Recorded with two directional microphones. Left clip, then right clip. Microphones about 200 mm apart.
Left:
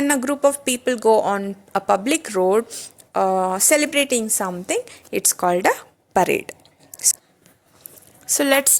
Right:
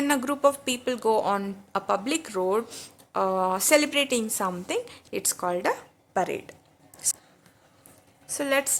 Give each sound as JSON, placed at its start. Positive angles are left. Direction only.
{"t": 0.0, "sound": "speech", "side_deg": 20}
{"t": 1.7, "sound": "a woman's voice", "side_deg": 25}
{"t": 8.3, "sound": "a woman's voice", "side_deg": 35}